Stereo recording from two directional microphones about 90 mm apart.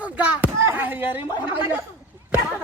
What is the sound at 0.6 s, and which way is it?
Speech, 25° right (ahead or behind).